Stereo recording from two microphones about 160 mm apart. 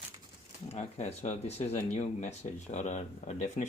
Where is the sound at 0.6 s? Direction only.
45° left (ahead or behind).